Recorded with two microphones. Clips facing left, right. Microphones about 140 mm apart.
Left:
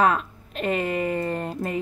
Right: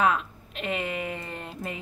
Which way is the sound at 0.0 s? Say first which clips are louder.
Left 3 dB; 40° left (ahead or behind).